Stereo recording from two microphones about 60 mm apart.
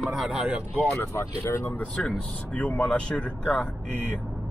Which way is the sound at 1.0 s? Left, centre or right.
Left.